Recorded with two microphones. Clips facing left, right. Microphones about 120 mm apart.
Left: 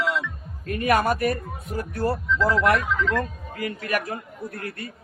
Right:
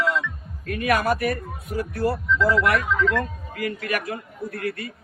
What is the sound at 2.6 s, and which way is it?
A man's voice, 30° left (ahead or behind).